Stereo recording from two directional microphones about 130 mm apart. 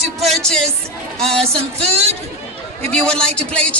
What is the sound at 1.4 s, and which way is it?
Speech, 50° right (ahead or behind).